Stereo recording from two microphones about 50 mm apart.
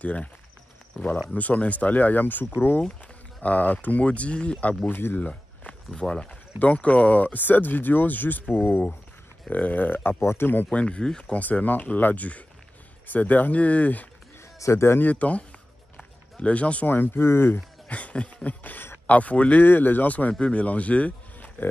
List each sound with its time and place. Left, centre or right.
0.0 s speech: left
1.3 s speech: left
4.8 s speech: left
9.5 s speech: left
10.7 s speech: left
11.3 s speech: left
14.6 s speech: left
15.0 s speech: left
16.9 s speech: left
17.8 s a sound: left
19.0 s speech: left
19.6 s speech: left